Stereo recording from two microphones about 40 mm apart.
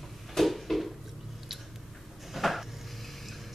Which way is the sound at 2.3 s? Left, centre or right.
Centre.